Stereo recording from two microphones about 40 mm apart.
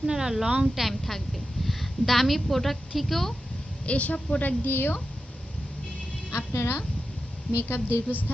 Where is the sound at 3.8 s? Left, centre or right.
Left.